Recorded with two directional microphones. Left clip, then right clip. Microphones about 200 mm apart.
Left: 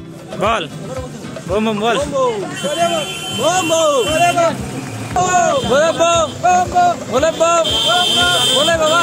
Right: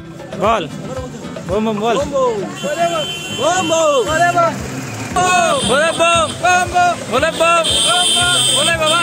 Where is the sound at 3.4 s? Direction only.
5° right (ahead or behind).